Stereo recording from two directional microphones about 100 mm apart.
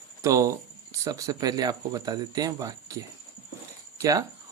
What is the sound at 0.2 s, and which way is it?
Speech, 30° right (ahead or behind).